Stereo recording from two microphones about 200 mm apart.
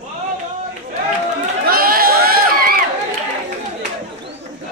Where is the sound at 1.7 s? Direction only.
50° right (ahead or behind).